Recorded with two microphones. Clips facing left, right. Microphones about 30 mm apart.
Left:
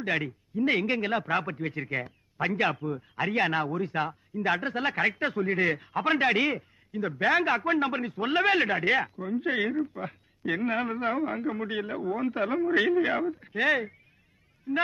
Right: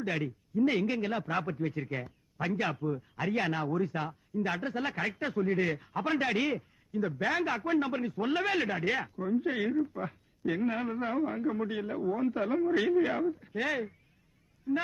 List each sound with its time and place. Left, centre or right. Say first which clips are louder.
0.0 s a man's voice: left 4 dB; left
9.1 s speech: right 1 dB; left
9.4 s a man's voice: left 6 dB; left
11.3 s a man's voice: left 1 dB; left